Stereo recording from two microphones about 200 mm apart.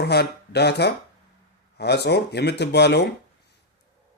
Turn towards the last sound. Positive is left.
turn(degrees=55)  # may be behind; listen again after turning